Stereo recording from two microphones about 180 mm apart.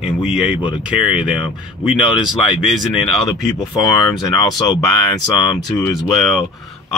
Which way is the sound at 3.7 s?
20° left (ahead or behind).